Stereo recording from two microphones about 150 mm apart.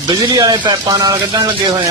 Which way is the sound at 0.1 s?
25° right (ahead or behind).